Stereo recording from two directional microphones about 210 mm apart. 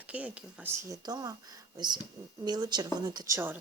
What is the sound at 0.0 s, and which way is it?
Speech, 5° right (ahead or behind).